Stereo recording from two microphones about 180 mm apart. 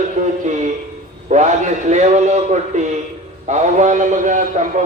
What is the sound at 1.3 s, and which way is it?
A man's voice, 40° right (ahead or behind).